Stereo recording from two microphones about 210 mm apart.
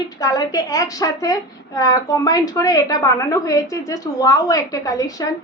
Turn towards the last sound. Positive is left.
turn(degrees=15)  # may be behind; listen again after turning